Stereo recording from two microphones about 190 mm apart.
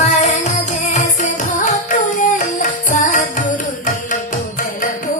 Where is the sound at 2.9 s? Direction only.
40° left (ahead or behind).